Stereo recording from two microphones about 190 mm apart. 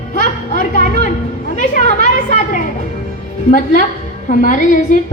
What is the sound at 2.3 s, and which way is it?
Music, 45° left (ahead or behind).